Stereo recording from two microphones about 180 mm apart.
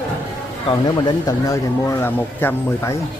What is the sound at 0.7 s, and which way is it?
Speech, 20° left (ahead or behind).